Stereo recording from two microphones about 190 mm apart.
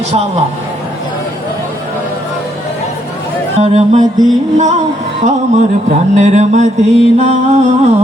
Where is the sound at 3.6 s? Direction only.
35° right (ahead or behind).